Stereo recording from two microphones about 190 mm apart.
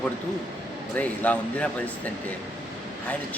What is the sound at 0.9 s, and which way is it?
Speech, 5° left (ahead or behind).